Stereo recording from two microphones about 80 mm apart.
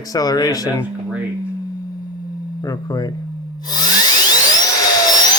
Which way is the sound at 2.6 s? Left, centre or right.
Left.